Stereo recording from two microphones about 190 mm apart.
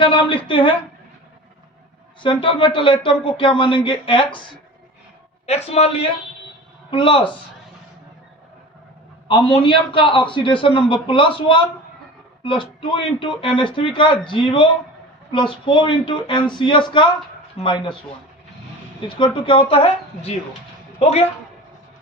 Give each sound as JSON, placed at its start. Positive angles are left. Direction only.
{"t": 0.0, "sound": "a man's voice", "side_deg": 25}
{"t": 2.2, "sound": "a man's voice", "side_deg": 25}
{"t": 5.7, "sound": "a man's voice", "side_deg": 35}
{"t": 9.2, "sound": "a man's voice", "side_deg": 30}
{"t": 19.0, "sound": "a man's voice", "side_deg": 25}